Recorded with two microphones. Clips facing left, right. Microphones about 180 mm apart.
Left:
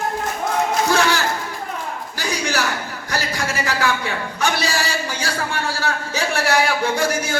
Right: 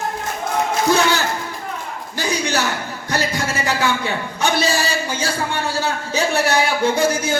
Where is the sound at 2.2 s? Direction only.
20° right (ahead or behind).